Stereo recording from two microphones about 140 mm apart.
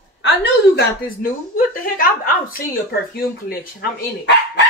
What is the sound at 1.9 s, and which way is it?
Speech, 90° left.